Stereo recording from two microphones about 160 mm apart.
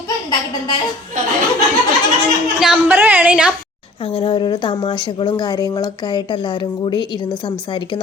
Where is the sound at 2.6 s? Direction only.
10° right (ahead or behind).